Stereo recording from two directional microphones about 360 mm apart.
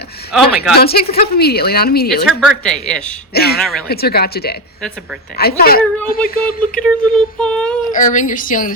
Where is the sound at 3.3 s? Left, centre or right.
Left.